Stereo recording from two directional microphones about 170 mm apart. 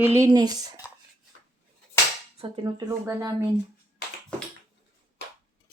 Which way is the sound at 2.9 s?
15° right (ahead or behind).